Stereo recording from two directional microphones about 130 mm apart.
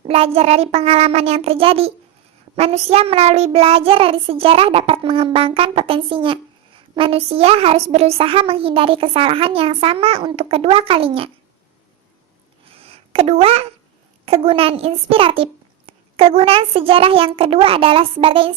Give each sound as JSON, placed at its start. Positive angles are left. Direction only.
{"t": 0.0, "sound": "child singing", "side_deg": -50}
{"t": 12.7, "sound": "a sound", "side_deg": -50}
{"t": 14.3, "sound": "child singing", "side_deg": -45}